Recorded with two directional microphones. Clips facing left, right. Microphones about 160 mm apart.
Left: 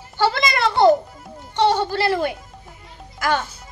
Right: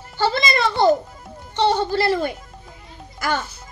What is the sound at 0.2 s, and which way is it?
Speech, 75° left (ahead or behind).